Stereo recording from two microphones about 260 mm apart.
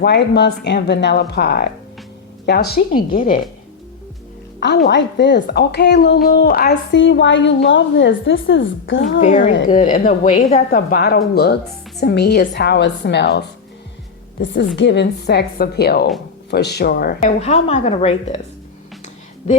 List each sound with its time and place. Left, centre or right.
0.0 s a woman's voice: left
4.9 s a woman's voice: left
9.2 s a woman's voice: left